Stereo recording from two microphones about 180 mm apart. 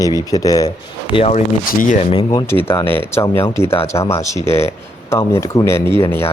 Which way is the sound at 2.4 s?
10° left (ahead or behind).